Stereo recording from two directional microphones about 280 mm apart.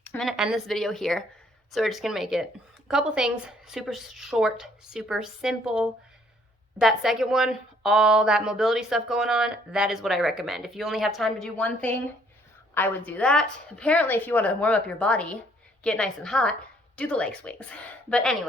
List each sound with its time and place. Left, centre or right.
0.0 s a woman's voice: centre